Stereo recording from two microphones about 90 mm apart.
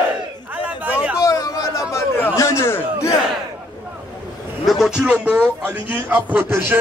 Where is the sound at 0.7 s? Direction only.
15° right (ahead or behind).